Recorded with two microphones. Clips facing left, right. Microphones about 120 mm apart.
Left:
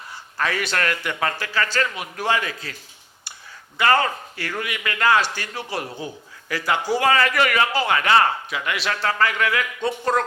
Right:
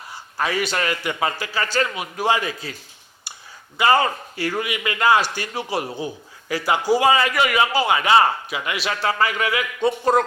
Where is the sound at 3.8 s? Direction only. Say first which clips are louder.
Right 2 dB; 15° right (ahead or behind).